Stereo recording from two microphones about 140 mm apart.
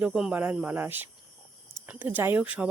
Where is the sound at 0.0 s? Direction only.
5° right (ahead or behind).